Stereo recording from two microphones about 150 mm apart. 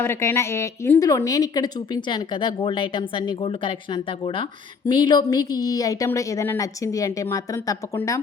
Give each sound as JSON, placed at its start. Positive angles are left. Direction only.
{"t": 0.0, "sound": "a woman's voice", "side_deg": 15}